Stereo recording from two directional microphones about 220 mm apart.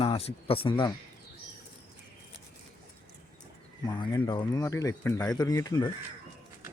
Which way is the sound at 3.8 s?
20° left (ahead or behind).